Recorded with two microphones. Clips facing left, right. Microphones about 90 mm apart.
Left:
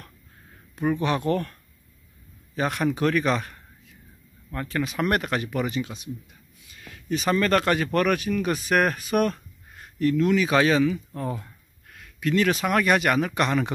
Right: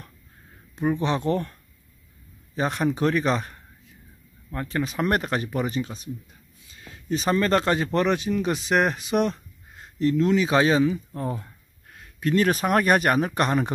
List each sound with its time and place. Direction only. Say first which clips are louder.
0.7 s speech: even; 25° right (ahead or behind)
4.6 s speech: even; 30° right (ahead or behind)